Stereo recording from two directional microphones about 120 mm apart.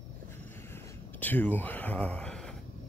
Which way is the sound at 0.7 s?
15° left (ahead or behind).